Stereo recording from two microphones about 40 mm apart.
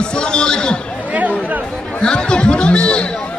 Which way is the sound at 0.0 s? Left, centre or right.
Left.